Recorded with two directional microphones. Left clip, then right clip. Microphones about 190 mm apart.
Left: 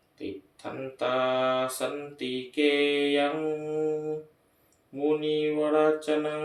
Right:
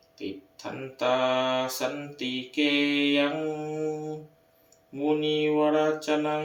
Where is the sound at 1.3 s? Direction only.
5° left (ahead or behind).